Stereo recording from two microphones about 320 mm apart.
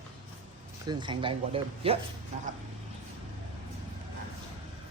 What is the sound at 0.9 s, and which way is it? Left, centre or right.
Speech, centre.